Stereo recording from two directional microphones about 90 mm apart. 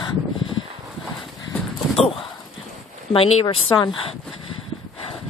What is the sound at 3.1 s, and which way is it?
Speech, 60° left (ahead or behind).